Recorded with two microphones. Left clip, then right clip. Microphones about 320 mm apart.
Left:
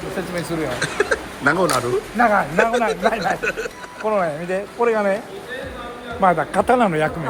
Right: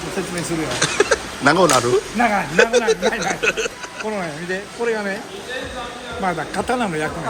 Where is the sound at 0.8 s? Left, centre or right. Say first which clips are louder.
Right 5 dB; centre.